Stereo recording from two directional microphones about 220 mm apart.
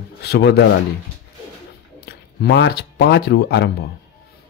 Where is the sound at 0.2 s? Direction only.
50° left (ahead or behind).